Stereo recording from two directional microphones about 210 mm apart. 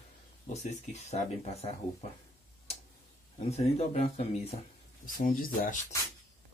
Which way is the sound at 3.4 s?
30° left (ahead or behind).